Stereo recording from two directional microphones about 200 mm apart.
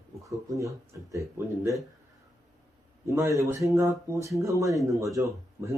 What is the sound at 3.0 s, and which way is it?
Speech, 15° right (ahead or behind).